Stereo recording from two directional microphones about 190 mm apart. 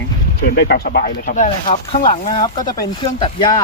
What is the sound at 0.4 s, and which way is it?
Speech, 55° left (ahead or behind).